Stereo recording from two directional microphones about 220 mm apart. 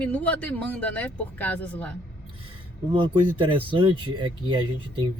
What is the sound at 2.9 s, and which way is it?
Speech, 20° right (ahead or behind).